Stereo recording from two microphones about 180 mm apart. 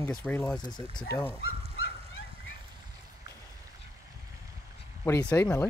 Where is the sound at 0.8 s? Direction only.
30° right (ahead or behind).